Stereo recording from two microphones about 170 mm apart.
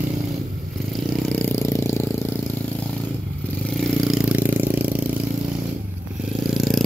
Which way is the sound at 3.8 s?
5° right (ahead or behind).